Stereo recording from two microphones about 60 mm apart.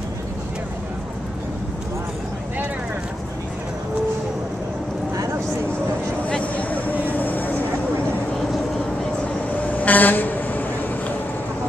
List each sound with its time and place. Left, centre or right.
6.2 s vehicle: left
9.6 s vehicle: left